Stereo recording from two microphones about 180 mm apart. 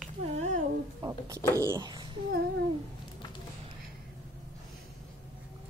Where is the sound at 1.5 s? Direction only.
20° right (ahead or behind).